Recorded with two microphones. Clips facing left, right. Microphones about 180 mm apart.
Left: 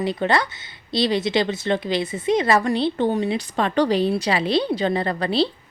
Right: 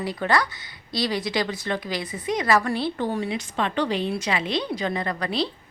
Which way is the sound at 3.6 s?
40° left (ahead or behind).